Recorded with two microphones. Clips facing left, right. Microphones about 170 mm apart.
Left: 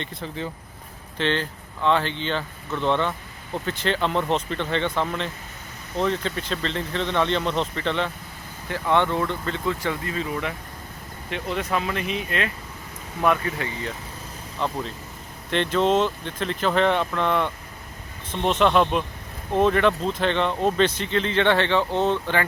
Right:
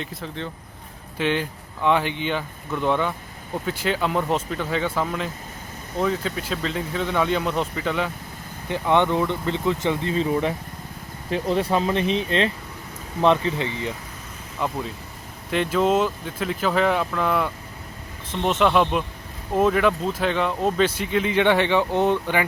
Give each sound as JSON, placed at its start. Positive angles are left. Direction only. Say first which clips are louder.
{"t": 0.0, "sound": "speech", "louder": "even", "side_deg": 0}
{"t": 1.2, "sound": "speech", "louder": "right 1 dB", "side_deg": -10}
{"t": 8.7, "sound": "speech", "louder": "right 2 dB", "side_deg": -15}
{"t": 14.6, "sound": "speech", "louder": "right 1 dB", "side_deg": -5}